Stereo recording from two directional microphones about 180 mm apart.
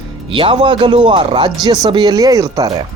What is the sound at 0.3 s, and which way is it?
Speech, 30° right (ahead or behind).